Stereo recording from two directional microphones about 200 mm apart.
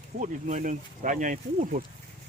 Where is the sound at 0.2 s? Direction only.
40° right (ahead or behind).